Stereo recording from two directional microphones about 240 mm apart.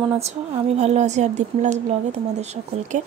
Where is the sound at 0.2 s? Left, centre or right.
Right.